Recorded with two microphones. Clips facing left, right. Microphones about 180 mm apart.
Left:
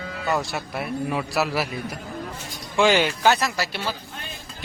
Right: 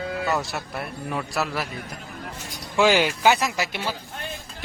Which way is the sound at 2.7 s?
5° right (ahead or behind).